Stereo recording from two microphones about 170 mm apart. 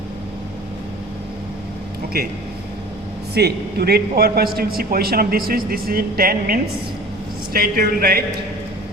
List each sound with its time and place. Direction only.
2.1 s a man's voice: 70° right (ahead or behind)
3.3 s a man's voice: 70° right (ahead or behind)